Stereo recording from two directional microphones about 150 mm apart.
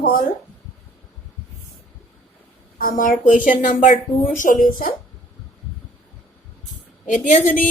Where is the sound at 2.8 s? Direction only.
65° left (ahead or behind).